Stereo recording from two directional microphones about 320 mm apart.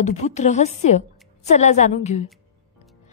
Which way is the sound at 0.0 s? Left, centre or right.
Left.